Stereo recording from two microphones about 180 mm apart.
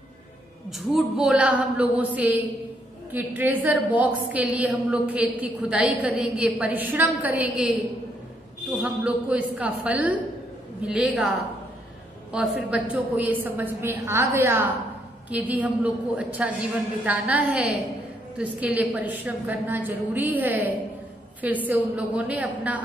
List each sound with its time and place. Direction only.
0.7 s a woman's voice: centre (ahead or behind)
8.8 s a woman's voice: 5° right (ahead or behind)
18.8 s a woman's voice: 10° right (ahead or behind)